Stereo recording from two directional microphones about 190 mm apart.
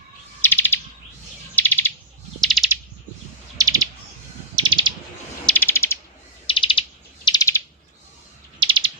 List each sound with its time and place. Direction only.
0.4 s bird: 10° left (ahead or behind)
3.6 s bird: 20° right (ahead or behind)
5.5 s bird: 10° left (ahead or behind)
6.5 s bird: 25° left (ahead or behind)
7.3 s bird: 15° left (ahead or behind)
8.5 s bird: 25° right (ahead or behind)